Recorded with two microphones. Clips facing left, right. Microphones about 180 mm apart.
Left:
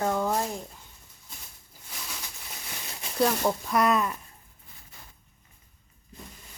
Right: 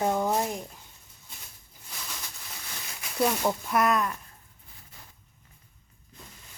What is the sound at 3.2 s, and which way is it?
Speech, centre (ahead or behind).